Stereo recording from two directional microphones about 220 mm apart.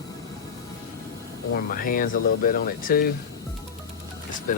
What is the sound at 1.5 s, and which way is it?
Speech, 40° left (ahead or behind).